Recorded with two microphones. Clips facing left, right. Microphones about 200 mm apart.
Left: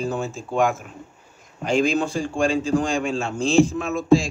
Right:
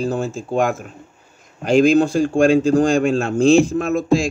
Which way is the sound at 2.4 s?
70° right (ahead or behind).